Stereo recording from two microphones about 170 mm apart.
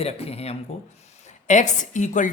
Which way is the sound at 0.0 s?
35° left (ahead or behind).